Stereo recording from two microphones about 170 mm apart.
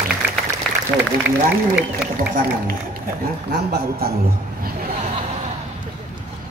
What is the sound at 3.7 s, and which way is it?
Speech, 65° right (ahead or behind).